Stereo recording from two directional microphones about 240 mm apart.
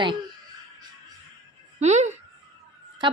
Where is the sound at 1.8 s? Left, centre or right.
Right.